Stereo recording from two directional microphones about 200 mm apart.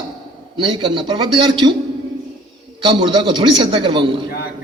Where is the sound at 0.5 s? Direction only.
25° right (ahead or behind).